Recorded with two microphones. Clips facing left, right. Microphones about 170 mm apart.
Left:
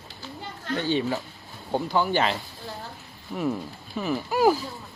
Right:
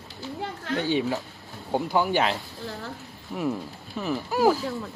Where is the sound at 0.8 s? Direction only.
10° right (ahead or behind).